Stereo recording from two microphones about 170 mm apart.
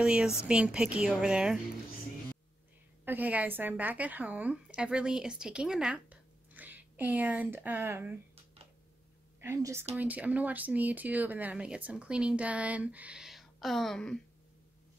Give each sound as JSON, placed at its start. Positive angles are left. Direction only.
{"t": 0.0, "sound": "a woman's voice", "side_deg": -5}
{"t": 3.1, "sound": "a woman's voice", "side_deg": -10}
{"t": 9.4, "sound": "speech", "side_deg": -15}